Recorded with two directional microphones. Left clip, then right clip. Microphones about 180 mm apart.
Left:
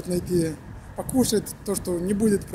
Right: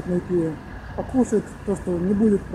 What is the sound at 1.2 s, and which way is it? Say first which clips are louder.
Speech: right 1 dB; 20° left (ahead or behind).